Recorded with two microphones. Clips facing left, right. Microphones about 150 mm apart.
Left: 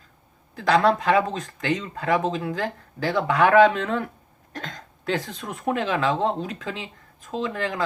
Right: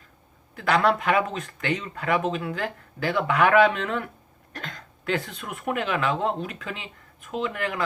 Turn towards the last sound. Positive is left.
turn(degrees=30)  # may be behind; listen again after turning